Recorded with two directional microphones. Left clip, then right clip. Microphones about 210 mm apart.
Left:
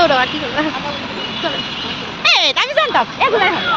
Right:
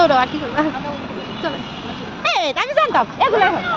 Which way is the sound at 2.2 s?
45° right (ahead or behind).